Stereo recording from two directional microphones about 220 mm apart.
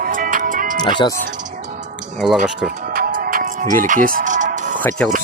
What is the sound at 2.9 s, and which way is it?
Music, 40° right (ahead or behind).